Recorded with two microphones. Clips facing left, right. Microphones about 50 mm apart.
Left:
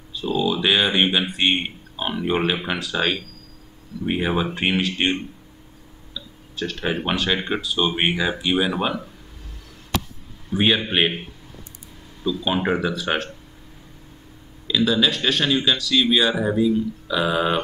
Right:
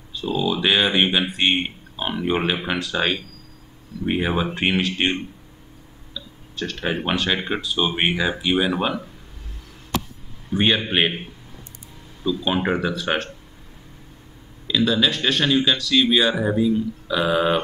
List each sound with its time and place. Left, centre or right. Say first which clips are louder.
0.1 s speech: left 1 dB; centre
10.5 s speech: even; centre
12.2 s speech: right 1 dB; centre
14.7 s speech: even; centre